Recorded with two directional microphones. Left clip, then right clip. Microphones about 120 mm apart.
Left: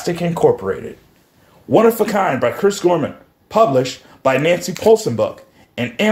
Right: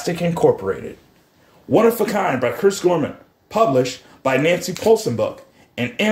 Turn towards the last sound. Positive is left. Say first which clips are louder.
# left 3 dB
turn(degrees=25)  # may be behind; listen again after turning